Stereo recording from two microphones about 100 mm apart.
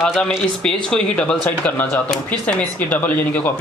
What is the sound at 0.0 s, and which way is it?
Speech, centre (ahead or behind).